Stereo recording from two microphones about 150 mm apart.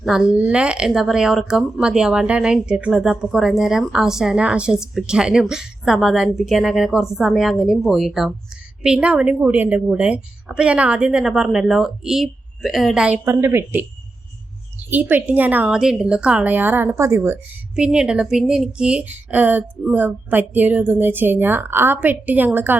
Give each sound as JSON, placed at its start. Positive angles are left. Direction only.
{"t": 0.0, "sound": "speech", "side_deg": -5}
{"t": 13.2, "sound": "speech", "side_deg": -15}
{"t": 14.8, "sound": "speech", "side_deg": -10}
{"t": 17.7, "sound": "speech", "side_deg": -5}